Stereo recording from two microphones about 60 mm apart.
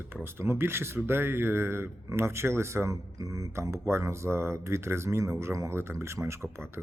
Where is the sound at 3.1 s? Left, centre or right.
Right.